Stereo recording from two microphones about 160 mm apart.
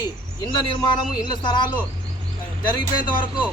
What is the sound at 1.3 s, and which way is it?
Speech, 25° left (ahead or behind).